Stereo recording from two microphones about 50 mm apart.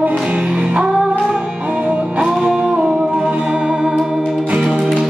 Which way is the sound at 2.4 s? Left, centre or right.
Centre.